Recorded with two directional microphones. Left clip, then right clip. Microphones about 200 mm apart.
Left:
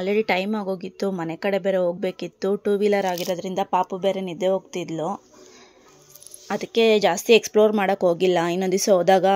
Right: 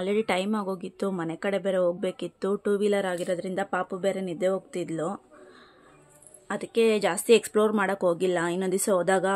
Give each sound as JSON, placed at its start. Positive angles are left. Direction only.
{"t": 0.0, "sound": "a woman's voice", "side_deg": 10}
{"t": 6.4, "sound": "a woman's voice", "side_deg": 20}